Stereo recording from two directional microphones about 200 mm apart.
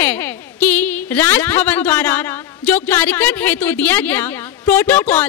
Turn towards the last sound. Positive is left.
turn(degrees=10)  # may be behind; listen again after turning